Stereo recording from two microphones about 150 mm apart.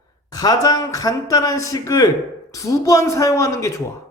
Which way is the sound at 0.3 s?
25° left (ahead or behind).